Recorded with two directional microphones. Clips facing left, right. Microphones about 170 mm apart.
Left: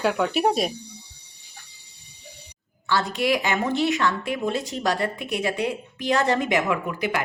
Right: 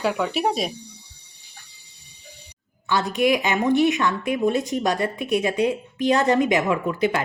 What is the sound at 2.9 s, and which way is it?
Speech, 20° right (ahead or behind).